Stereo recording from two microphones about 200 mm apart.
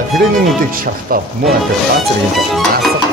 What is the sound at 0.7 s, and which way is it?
Speech, 45° right (ahead or behind).